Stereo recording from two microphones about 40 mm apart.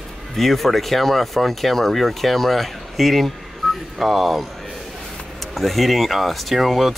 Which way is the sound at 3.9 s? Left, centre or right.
Centre.